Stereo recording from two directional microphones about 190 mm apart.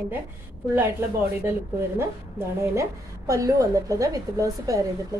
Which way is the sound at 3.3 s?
15° right (ahead or behind).